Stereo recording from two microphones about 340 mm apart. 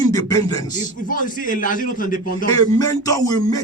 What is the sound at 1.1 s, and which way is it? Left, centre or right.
A man's voice, left.